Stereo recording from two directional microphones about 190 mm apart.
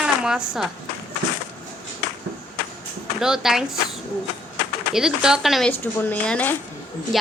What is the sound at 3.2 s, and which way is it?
Speech, 5° right (ahead or behind).